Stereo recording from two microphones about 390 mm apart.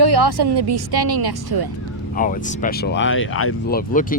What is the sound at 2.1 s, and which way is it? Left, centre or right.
Speech, left.